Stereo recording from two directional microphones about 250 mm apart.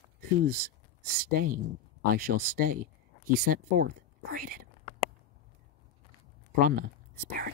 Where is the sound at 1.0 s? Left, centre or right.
Right.